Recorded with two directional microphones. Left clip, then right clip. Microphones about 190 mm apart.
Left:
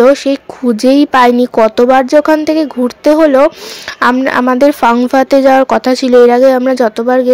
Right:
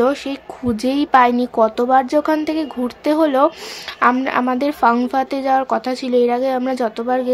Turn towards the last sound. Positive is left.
turn(degrees=30)  # may be behind; listen again after turning